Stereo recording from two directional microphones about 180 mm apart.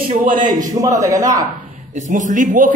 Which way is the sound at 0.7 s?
20° right (ahead or behind).